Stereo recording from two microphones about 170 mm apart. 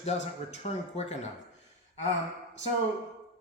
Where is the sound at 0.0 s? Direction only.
40° left (ahead or behind).